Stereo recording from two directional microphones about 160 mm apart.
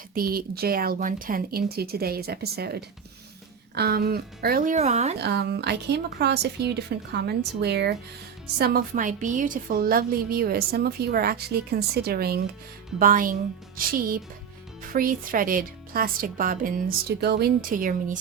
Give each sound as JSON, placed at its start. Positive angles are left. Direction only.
{"t": 0.1, "sound": "a woman's voice", "side_deg": -65}
{"t": 5.2, "sound": "a woman's voice", "side_deg": -90}
{"t": 8.5, "sound": "a woman's voice", "side_deg": -75}
{"t": 13.0, "sound": "a woman's voice", "side_deg": -60}